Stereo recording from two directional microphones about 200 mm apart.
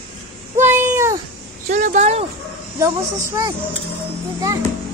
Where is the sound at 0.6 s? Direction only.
10° right (ahead or behind).